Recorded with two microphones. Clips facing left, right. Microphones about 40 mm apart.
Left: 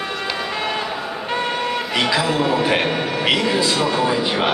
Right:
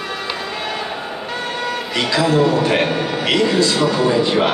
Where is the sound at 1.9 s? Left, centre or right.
Centre.